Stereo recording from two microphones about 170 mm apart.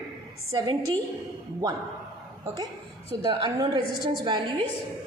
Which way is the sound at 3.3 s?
25° right (ahead or behind).